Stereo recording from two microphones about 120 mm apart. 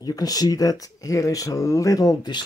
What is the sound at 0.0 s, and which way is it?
Speech, 30° left (ahead or behind).